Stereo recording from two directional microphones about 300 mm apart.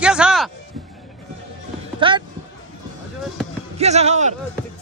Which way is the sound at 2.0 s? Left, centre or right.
Centre.